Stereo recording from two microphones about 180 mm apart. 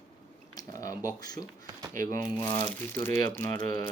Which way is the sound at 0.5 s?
20° left (ahead or behind).